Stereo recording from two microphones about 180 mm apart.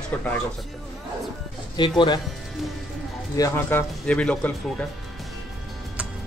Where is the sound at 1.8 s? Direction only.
25° left (ahead or behind).